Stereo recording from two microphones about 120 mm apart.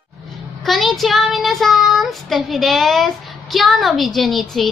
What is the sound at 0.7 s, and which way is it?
Child singing, centre (ahead or behind).